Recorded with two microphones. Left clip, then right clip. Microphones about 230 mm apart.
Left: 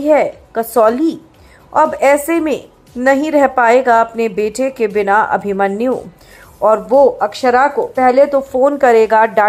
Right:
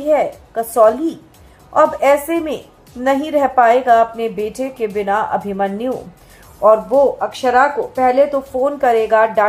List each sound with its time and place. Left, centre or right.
0.0 s a woman's voice: left